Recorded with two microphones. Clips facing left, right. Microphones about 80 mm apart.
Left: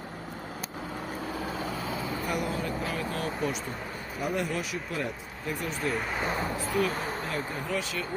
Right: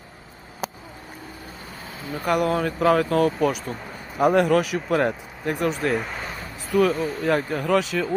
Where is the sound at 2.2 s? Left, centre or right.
Right.